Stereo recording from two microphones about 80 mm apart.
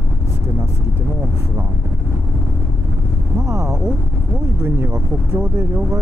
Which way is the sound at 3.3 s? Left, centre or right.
Right.